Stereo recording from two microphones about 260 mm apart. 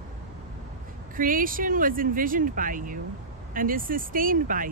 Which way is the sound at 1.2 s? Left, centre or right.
Right.